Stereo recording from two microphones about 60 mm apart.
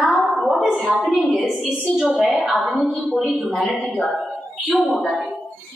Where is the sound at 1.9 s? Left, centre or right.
Centre.